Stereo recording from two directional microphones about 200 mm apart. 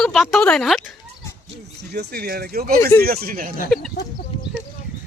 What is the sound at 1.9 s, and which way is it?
Speech, 50° right (ahead or behind).